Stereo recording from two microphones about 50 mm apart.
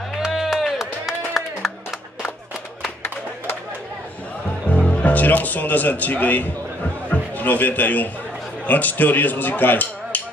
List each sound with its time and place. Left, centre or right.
0.1 s a sound: centre
4.6 s music: left
4.9 s a man's voice: left